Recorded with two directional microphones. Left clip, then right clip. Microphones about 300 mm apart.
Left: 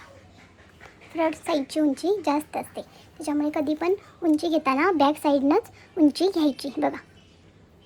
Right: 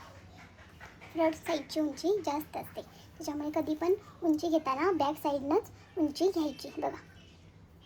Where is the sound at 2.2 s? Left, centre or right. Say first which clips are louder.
Left 9 dB; centre.